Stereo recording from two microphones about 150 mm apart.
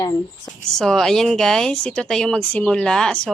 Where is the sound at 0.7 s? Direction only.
5° left (ahead or behind).